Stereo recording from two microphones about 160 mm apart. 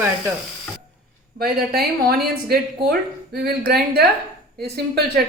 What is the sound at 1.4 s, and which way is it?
Speech, 70° right (ahead or behind).